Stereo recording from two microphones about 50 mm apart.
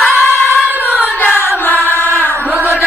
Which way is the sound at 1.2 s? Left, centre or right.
Left.